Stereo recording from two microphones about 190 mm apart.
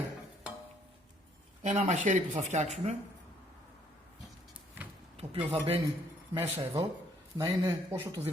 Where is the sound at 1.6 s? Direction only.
35° right (ahead or behind).